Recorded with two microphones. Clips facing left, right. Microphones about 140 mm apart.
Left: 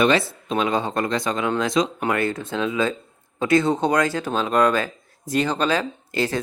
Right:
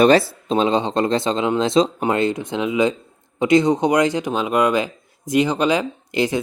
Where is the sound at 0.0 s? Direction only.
35° right (ahead or behind).